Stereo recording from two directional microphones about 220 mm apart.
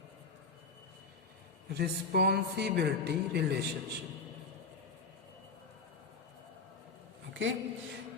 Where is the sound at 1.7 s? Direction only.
45° right (ahead or behind).